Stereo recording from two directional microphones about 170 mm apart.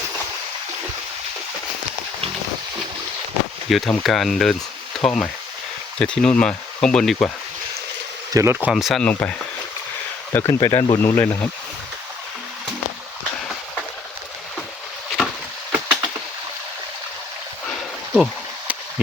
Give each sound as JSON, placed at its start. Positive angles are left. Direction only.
{"t": 3.7, "sound": "speech", "side_deg": 0}
{"t": 8.3, "sound": "speech", "side_deg": -15}
{"t": 8.7, "sound": "speech", "side_deg": 0}
{"t": 10.3, "sound": "speech", "side_deg": 15}
{"t": 15.7, "sound": "a sound", "side_deg": -10}
{"t": 17.7, "sound": "a sound", "side_deg": 5}